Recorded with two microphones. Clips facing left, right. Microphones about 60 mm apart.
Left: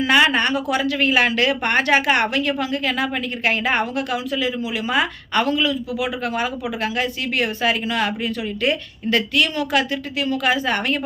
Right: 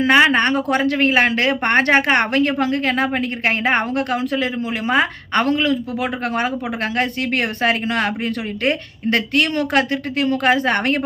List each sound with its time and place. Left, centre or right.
0.0 s a woman's voice: right